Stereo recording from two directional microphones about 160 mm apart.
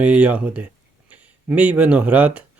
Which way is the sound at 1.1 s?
10° right (ahead or behind).